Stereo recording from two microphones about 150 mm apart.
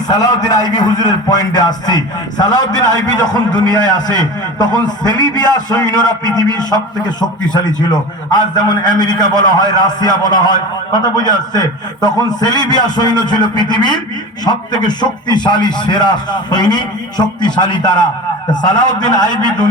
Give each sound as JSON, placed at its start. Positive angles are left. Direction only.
{"t": 0.1, "sound": "a man's voice", "side_deg": 25}